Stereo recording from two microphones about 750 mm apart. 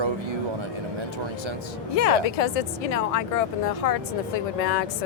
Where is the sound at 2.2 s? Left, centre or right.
Left.